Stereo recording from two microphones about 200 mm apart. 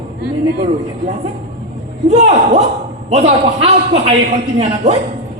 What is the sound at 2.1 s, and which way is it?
A woman's voice, 30° right (ahead or behind).